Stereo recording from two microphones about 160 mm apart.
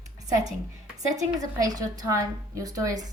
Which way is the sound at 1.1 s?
20° right (ahead or behind).